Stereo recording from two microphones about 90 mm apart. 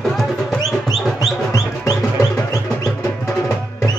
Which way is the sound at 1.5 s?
40° left (ahead or behind).